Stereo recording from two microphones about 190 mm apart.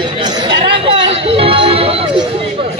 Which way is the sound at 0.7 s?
30° right (ahead or behind).